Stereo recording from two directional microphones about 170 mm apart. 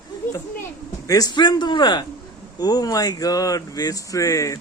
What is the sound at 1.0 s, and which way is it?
Speech, 20° left (ahead or behind).